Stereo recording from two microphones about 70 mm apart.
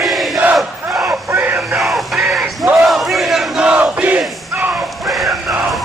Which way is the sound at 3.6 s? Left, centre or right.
Centre.